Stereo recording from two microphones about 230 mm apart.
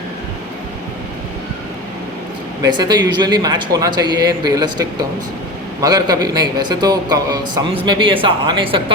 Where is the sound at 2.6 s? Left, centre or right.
Centre.